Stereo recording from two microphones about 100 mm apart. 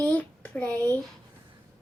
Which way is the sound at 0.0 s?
15° left (ahead or behind).